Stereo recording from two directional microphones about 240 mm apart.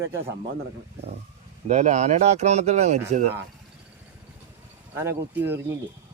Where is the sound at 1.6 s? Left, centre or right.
Right.